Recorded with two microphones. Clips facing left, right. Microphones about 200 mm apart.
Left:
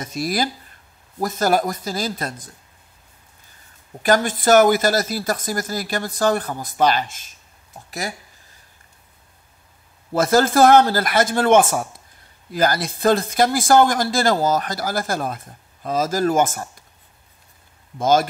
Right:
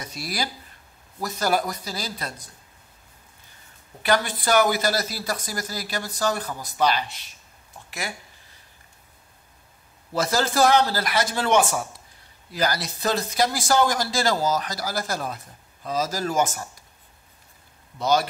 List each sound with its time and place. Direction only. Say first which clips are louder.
0.0 s speech: left 8 dB; 50° left (ahead or behind)
4.0 s speech: left 5 dB; 45° left (ahead or behind)
10.1 s speech: left 7 dB; 50° left (ahead or behind)
17.9 s speech: left 5 dB; 50° left (ahead or behind)